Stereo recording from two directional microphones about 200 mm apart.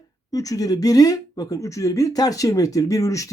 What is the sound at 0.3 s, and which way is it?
Speech, 15° left (ahead or behind).